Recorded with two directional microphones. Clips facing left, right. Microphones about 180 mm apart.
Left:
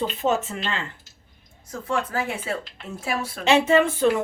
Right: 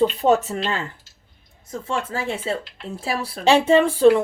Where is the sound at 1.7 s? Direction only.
25° right (ahead or behind).